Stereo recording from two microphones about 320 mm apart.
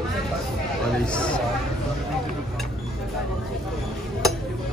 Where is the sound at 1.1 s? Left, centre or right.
Centre.